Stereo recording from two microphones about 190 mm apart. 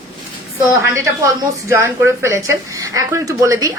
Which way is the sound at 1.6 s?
10° right (ahead or behind).